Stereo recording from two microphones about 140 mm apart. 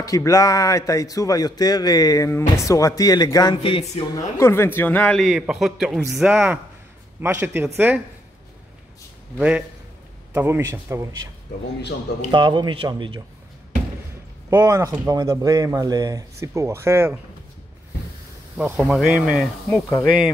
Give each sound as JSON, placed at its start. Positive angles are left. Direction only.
{"t": 0.0, "sound": "speech", "side_deg": 25}
{"t": 4.1, "sound": "speech", "side_deg": 20}
{"t": 5.2, "sound": "a man's voice", "side_deg": -5}
{"t": 9.4, "sound": "speech", "side_deg": -10}
{"t": 12.3, "sound": "a man's voice", "side_deg": -35}
{"t": 14.5, "sound": "speech", "side_deg": -20}
{"t": 18.6, "sound": "a man's voice", "side_deg": -5}
{"t": 19.7, "sound": "speech", "side_deg": 10}